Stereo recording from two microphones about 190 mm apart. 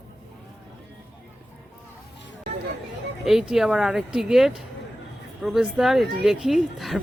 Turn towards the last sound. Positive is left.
turn(degrees=0)  # may be behind; listen again after turning